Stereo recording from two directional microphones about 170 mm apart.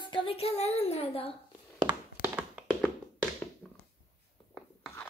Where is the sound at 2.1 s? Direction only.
10° right (ahead or behind).